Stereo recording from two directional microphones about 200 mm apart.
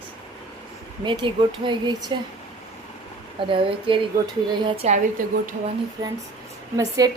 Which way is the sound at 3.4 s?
25° right (ahead or behind).